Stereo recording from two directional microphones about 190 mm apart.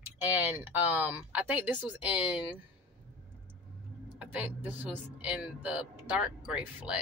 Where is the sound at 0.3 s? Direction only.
10° right (ahead or behind).